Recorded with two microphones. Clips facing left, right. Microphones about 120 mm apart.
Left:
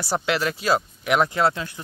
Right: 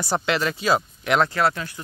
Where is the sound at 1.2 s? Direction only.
20° left (ahead or behind).